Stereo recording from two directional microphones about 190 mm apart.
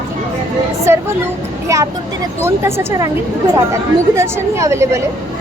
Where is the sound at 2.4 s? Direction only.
15° right (ahead or behind).